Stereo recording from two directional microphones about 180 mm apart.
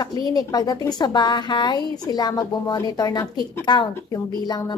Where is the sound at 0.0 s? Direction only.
20° left (ahead or behind).